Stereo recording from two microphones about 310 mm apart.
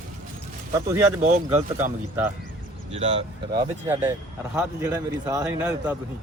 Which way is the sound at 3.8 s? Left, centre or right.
Centre.